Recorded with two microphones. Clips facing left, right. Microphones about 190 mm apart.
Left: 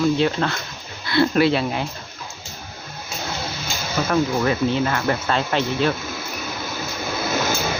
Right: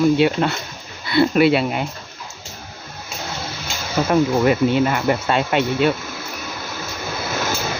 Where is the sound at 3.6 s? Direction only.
20° right (ahead or behind).